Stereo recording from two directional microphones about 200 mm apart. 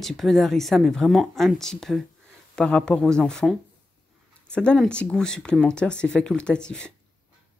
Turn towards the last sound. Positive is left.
turn(degrees=5)  # may be behind; listen again after turning